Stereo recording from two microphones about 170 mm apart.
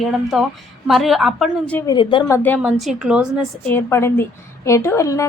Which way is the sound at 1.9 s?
30° left (ahead or behind).